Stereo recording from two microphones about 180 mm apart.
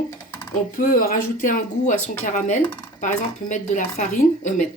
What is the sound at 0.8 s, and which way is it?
Speech, 50° left (ahead or behind).